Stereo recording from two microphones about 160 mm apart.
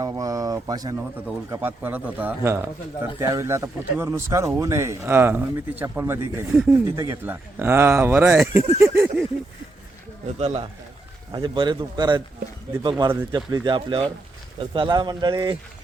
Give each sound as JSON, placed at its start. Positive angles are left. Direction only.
{"t": 0.0, "sound": "speech", "side_deg": -20}
{"t": 1.5, "sound": "speech", "side_deg": -10}
{"t": 6.5, "sound": "speech", "side_deg": 0}
{"t": 6.9, "sound": "speech", "side_deg": -15}
{"t": 10.3, "sound": "speech", "side_deg": -40}
{"t": 11.3, "sound": "speech", "side_deg": -30}